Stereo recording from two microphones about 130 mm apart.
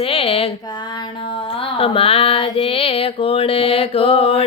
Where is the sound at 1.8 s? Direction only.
45° left (ahead or behind).